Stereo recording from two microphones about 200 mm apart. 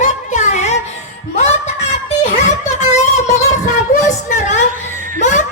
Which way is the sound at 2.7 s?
35° left (ahead or behind).